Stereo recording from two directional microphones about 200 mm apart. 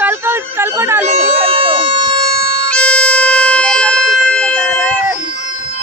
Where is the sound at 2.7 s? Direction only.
5° left (ahead or behind).